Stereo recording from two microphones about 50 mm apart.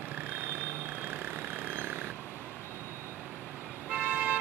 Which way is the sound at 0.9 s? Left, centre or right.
Right.